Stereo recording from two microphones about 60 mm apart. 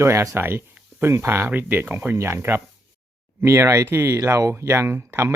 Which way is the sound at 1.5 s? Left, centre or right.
Right.